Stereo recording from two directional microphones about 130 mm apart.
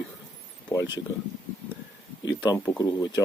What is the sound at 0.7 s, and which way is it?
Speech, 25° left (ahead or behind).